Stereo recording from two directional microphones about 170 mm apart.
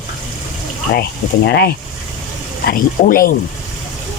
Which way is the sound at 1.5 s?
65° left (ahead or behind).